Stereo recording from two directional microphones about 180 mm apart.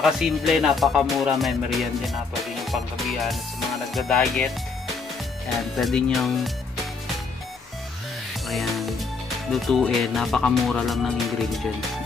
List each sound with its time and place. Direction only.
0.0 s speech: centre (ahead or behind)
5.8 s speech: 5° left (ahead or behind)
8.5 s music: centre (ahead or behind)
9.5 s speech: centre (ahead or behind)